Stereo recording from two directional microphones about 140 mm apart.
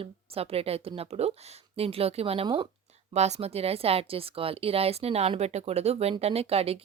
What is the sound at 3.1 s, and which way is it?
Speech, 50° right (ahead or behind).